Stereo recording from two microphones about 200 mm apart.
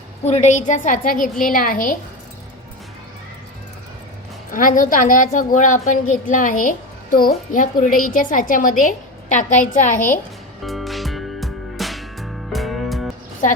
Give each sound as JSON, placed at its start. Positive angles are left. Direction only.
{"t": 0.3, "sound": "a woman's voice", "side_deg": 35}
{"t": 4.5, "sound": "a woman's voice", "side_deg": 40}
{"t": 10.6, "sound": "music", "side_deg": 0}